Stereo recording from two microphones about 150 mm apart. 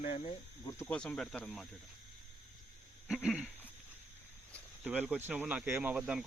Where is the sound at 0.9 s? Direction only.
5° left (ahead or behind).